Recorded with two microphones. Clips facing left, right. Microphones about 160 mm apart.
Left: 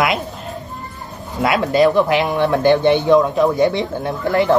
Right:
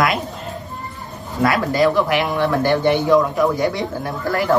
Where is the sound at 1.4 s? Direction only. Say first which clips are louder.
Left 2 dB; 20° left (ahead or behind).